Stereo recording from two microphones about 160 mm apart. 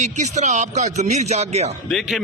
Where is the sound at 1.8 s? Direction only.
Centre (ahead or behind).